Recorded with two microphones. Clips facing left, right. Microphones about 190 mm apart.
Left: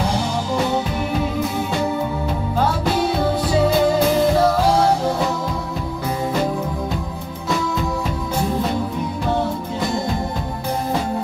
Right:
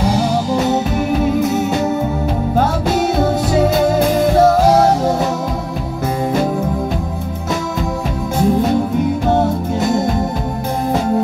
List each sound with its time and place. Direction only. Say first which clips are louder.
2.5 s music: right 3 dB; 50° right (ahead or behind)
4.4 s music: right 5 dB; 45° right (ahead or behind)